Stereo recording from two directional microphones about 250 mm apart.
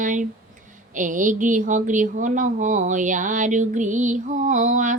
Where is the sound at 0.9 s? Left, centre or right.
Right.